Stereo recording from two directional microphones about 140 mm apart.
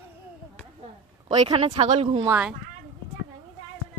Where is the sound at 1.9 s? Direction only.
55° right (ahead or behind).